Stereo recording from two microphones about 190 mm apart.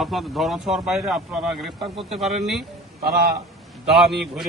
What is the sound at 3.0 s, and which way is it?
Speech, 55° right (ahead or behind).